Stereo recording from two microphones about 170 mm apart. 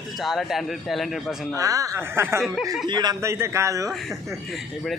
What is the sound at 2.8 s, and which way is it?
A man's voice, 25° right (ahead or behind).